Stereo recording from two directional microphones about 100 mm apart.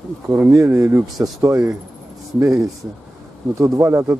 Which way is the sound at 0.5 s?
30° right (ahead or behind).